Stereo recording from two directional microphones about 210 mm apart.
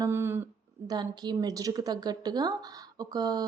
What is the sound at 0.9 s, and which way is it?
A woman's voice, 20° right (ahead or behind).